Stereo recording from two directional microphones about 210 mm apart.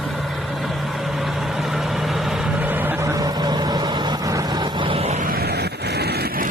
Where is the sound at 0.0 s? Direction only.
Centre (ahead or behind).